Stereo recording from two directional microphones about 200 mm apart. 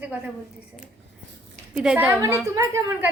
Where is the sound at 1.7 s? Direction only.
5° right (ahead or behind).